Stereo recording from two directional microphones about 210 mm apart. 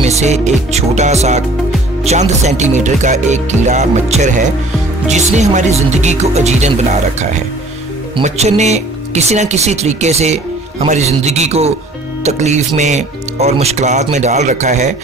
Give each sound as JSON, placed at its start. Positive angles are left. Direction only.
{"t": 0.0, "sound": "speech", "side_deg": -30}